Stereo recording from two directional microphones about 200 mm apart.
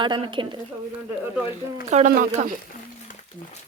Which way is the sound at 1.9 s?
35° right (ahead or behind).